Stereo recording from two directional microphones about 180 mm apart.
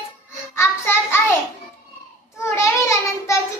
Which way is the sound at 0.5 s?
15° left (ahead or behind).